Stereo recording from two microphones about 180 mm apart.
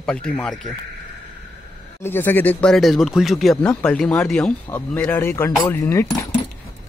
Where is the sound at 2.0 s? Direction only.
10° left (ahead or behind).